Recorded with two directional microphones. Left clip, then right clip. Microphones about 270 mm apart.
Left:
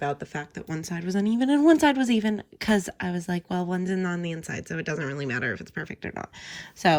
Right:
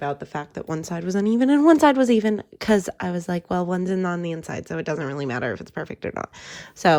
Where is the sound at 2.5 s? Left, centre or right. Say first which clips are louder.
Right 2 dB; centre.